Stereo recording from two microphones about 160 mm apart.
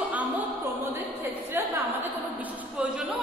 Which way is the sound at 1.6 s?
15° right (ahead or behind).